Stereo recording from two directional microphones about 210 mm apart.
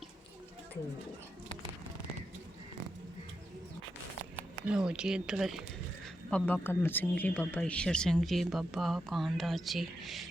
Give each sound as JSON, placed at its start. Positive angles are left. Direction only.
{"t": 4.7, "sound": "speech", "side_deg": -5}